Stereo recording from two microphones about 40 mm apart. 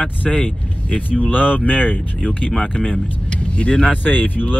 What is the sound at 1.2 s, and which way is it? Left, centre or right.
Speech, left.